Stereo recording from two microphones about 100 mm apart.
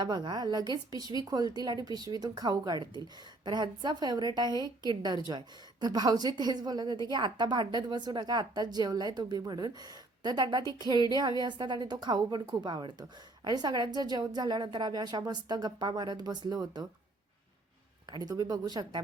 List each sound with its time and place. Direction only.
0.0 s a woman's voice: 45° right (ahead or behind)
18.1 s speech: 40° right (ahead or behind)